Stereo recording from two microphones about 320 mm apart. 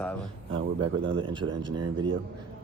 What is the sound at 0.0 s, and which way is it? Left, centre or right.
Speech, centre.